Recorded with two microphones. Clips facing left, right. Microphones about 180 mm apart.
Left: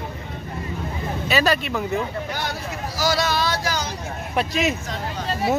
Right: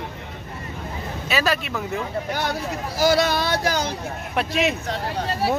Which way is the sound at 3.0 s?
55° right (ahead or behind).